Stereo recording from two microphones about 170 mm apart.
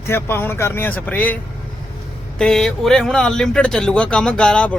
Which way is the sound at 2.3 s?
5° left (ahead or behind).